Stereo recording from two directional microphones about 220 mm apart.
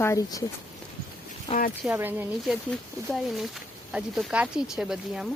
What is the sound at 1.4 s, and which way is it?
Speech, 35° left (ahead or behind).